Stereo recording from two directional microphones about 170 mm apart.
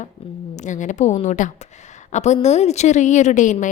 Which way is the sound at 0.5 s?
45° left (ahead or behind).